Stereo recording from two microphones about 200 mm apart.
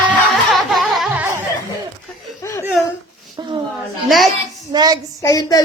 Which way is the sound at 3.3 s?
25° right (ahead or behind).